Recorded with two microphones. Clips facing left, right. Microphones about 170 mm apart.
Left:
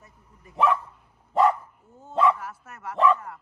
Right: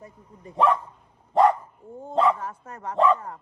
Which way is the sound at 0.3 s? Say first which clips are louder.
Right 2 dB; 30° right (ahead or behind).